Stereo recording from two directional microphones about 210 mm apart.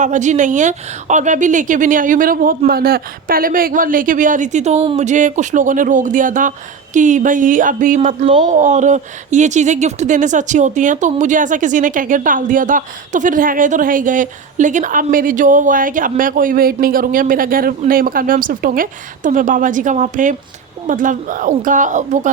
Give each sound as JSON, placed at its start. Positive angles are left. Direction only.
{"t": 0.0, "sound": "speech", "side_deg": -35}